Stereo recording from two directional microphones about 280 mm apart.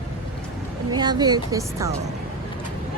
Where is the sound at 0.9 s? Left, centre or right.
Centre.